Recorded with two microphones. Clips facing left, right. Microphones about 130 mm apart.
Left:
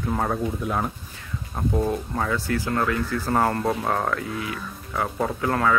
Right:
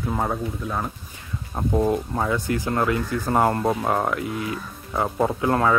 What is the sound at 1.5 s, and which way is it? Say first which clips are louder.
Speech: right 3 dB; 20° right (ahead or behind).